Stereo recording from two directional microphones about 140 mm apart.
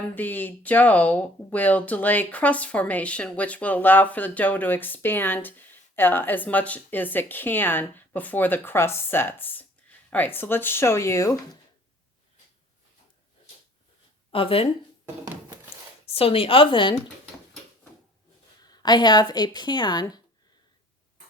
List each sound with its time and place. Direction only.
0.1 s speech: 15° left (ahead or behind)
14.3 s speech: 40° left (ahead or behind)
16.0 s a woman's voice: 45° left (ahead or behind)
18.6 s speech: 30° left (ahead or behind)